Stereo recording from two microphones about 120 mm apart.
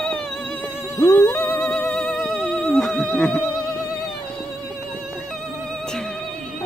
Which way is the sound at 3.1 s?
10° left (ahead or behind).